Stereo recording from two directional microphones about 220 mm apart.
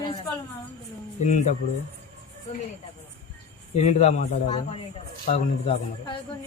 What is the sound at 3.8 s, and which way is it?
A man's voice, 30° left (ahead or behind).